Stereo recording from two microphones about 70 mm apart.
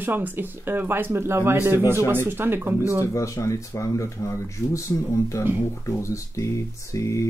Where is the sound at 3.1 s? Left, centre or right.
Left.